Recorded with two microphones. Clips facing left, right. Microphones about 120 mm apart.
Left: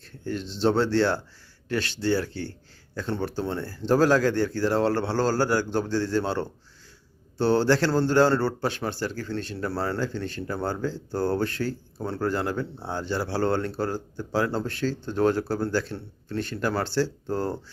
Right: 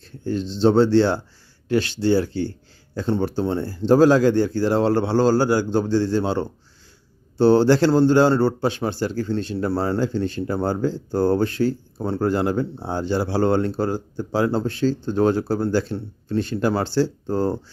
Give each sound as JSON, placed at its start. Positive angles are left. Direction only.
{"t": 0.3, "sound": "speech", "side_deg": -30}